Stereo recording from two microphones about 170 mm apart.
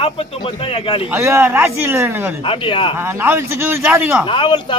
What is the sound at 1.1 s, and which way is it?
A man's voice, 15° right (ahead or behind).